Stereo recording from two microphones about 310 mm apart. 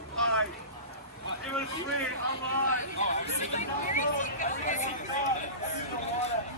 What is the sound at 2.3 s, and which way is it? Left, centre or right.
Speech, right.